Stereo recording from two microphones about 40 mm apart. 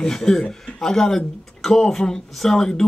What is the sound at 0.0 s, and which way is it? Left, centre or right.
A man's voice, centre.